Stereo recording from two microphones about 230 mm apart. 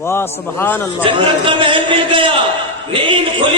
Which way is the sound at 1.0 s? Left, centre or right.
Right.